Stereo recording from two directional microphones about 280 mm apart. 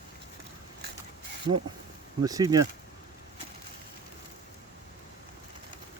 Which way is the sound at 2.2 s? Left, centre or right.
Centre.